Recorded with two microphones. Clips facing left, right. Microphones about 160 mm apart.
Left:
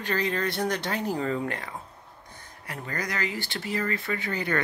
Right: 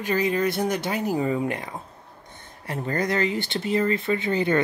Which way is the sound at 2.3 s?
25° right (ahead or behind).